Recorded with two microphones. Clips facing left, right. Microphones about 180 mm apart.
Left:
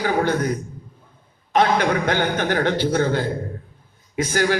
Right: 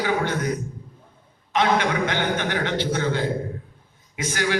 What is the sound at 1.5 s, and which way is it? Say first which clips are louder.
A man's voice: left 3 dB; 45° left (ahead or behind).